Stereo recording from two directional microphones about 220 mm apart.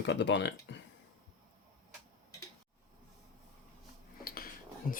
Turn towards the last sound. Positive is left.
turn(degrees=40)  # may be behind; listen again after turning